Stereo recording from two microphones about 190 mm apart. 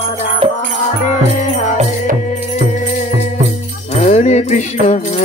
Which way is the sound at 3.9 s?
40° left (ahead or behind).